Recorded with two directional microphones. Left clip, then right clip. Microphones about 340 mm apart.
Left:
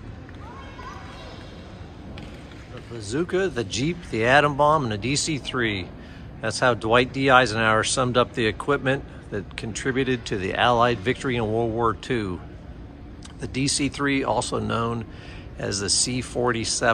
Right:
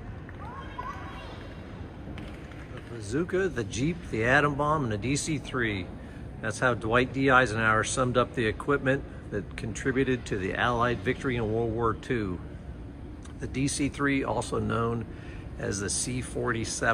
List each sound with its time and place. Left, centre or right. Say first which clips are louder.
3.1 s speech: left 4 dB; centre
13.4 s speech: left 5 dB; centre